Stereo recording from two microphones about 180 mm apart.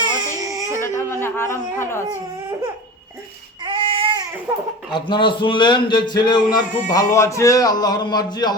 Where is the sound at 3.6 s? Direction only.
30° right (ahead or behind).